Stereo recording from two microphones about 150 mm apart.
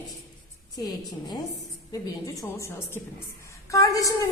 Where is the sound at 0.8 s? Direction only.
25° left (ahead or behind).